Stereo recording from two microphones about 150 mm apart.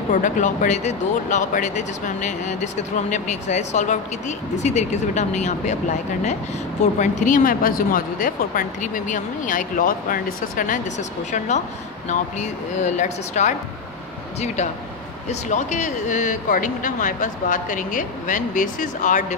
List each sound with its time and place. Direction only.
0.1 s speech: 55° left (ahead or behind)
6.8 s speech: 55° left (ahead or behind)
15.2 s speech: 50° left (ahead or behind)